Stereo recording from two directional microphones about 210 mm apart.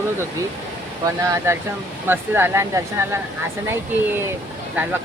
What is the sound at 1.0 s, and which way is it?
Speech, 15° right (ahead or behind).